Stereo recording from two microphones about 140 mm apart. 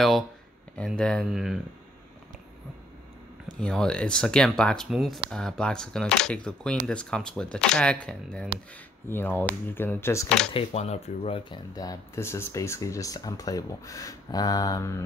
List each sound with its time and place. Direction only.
0.7 s speech: 5° left (ahead or behind)
3.5 s speech: 5° left (ahead or behind)
10.5 s speech: 50° left (ahead or behind)
11.7 s speech: 25° left (ahead or behind)